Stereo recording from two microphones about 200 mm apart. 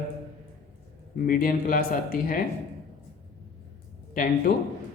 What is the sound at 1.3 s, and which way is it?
Speech, 45° left (ahead or behind).